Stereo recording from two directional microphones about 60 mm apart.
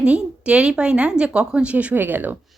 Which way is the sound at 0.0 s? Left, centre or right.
Centre.